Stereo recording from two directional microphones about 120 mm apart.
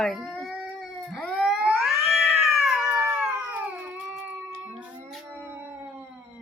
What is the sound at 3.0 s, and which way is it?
Cat, 15° right (ahead or behind).